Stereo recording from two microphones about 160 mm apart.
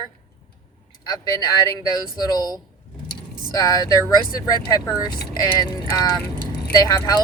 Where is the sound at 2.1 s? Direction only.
25° left (ahead or behind).